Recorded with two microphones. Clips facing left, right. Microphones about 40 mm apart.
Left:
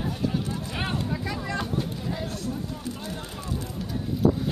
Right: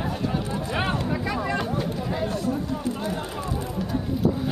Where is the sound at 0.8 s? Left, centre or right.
Right.